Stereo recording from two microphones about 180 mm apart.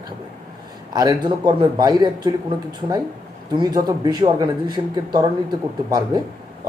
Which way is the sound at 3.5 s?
20° right (ahead or behind).